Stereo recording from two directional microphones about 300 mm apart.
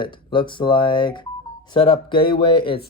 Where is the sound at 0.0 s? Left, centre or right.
Centre.